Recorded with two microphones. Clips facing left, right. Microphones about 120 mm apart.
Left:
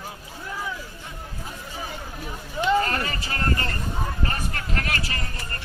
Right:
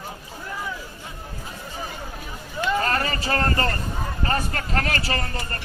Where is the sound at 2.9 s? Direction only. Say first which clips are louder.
Right 4 dB; 40° right (ahead or behind).